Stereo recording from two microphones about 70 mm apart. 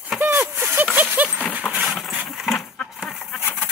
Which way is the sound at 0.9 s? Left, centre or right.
Right.